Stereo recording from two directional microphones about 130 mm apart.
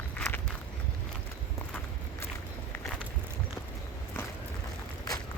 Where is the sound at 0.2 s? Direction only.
15° left (ahead or behind).